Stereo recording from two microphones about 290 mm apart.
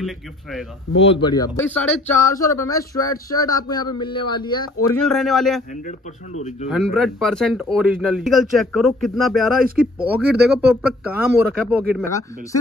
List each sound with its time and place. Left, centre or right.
0.0 s speech: centre
1.0 s a man's voice: centre
5.0 s speech: centre
6.7 s speech: centre
10.1 s speech: right
11.1 s speech: centre